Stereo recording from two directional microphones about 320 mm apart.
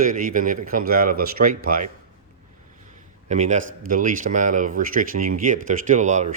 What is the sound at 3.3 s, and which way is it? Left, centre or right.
Speech, right.